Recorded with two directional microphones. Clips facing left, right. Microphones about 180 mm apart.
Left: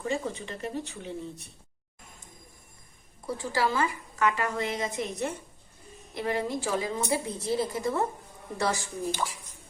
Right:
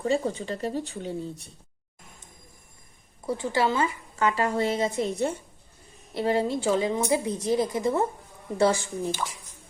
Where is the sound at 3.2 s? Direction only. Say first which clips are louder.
Right 3 dB; 25° right (ahead or behind).